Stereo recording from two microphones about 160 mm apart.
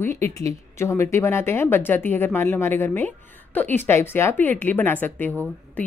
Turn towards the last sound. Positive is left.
turn(degrees=10)  # may be behind; listen again after turning